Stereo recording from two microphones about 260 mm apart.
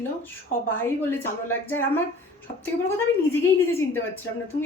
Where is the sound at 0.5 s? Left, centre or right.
Left.